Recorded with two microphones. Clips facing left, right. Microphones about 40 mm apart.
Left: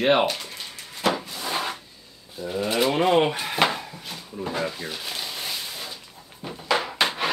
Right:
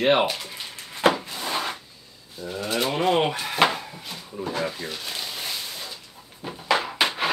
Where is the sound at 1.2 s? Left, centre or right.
Centre.